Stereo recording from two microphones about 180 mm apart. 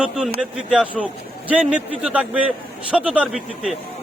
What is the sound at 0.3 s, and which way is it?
A man's voice, 5° right (ahead or behind).